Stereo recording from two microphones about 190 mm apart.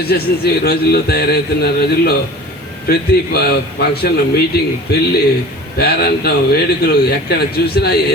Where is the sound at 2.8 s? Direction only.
55° left (ahead or behind).